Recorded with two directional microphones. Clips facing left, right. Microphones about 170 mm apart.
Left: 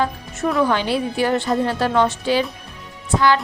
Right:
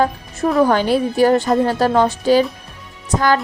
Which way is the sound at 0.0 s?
40° right (ahead or behind).